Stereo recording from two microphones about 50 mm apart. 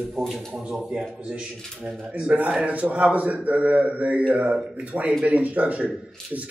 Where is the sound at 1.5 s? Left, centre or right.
Centre.